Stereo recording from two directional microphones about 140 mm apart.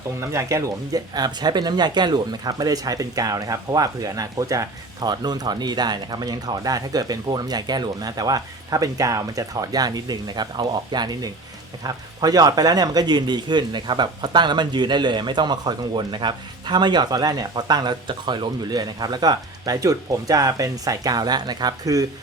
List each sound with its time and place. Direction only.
0.2 s speech: 20° right (ahead or behind)